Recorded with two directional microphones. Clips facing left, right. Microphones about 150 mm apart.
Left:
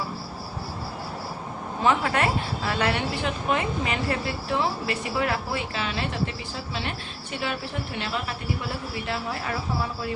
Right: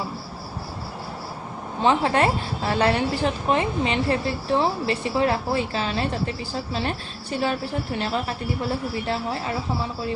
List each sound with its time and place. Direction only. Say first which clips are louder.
1.8 s a woman's voice: right 3 dB; 30° right (ahead or behind)